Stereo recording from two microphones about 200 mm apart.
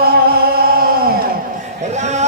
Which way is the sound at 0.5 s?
50° right (ahead or behind).